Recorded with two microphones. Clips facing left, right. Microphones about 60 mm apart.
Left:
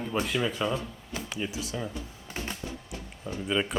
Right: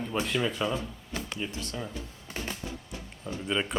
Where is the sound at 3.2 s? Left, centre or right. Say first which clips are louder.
Left 2 dB; centre.